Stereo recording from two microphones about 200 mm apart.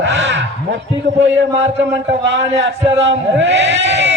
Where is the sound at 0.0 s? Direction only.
65° right (ahead or behind).